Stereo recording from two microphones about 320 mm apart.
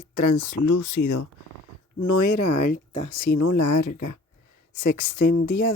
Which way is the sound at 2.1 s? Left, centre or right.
Left.